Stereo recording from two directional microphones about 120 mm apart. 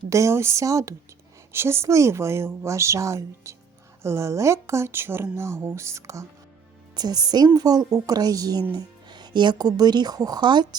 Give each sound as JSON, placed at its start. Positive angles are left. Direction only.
{"t": 0.1, "sound": "speech", "side_deg": -25}